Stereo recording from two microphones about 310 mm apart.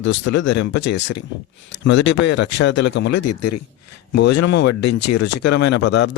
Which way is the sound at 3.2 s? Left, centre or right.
Left.